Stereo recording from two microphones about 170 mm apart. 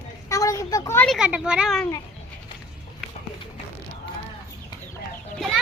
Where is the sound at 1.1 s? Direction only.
5° right (ahead or behind).